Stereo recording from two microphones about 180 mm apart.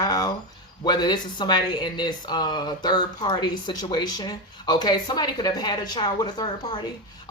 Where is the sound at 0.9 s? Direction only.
25° left (ahead or behind).